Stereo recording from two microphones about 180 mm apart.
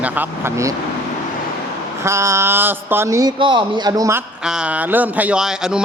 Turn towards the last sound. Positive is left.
turn(degrees=-5)  # may be behind; listen again after turning